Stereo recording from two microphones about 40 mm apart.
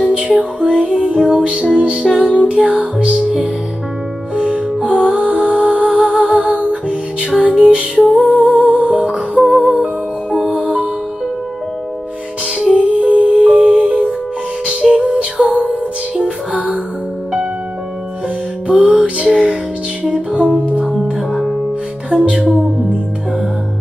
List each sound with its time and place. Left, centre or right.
0.1 s music: right
3.1 s music: centre
4.4 s music: right
8.1 s music: right
12.7 s music: right
15.5 s music: left
16.2 s music: right
18.7 s music: right
20.8 s music: centre
21.3 s music: centre
22.1 s music: right